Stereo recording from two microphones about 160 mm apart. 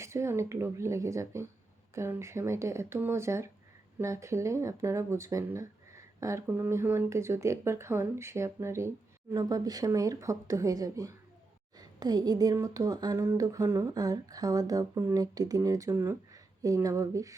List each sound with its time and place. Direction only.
0.0 s speech: 15° right (ahead or behind)